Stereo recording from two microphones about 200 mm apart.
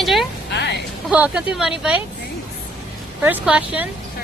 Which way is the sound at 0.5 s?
60° left (ahead or behind).